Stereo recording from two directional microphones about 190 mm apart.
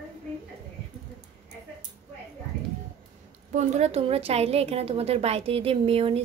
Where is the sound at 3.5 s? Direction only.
35° right (ahead or behind).